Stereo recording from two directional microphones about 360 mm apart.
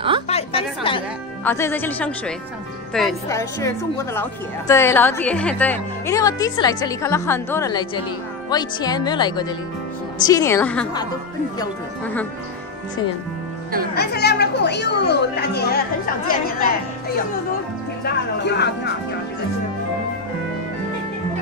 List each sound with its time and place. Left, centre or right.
0.3 s music: centre
2.9 s speech: centre
13.9 s speech: left
18.0 s speech: left